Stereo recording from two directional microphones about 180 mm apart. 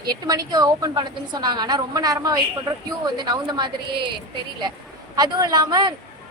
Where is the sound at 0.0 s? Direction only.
20° right (ahead or behind).